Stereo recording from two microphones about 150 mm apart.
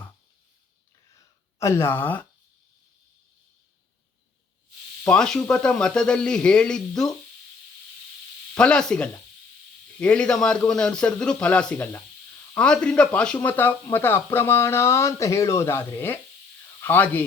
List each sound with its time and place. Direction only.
1.1 s a sound: 20° left (ahead or behind)
5.0 s speech: 5° left (ahead or behind)
8.5 s speech: 5° left (ahead or behind)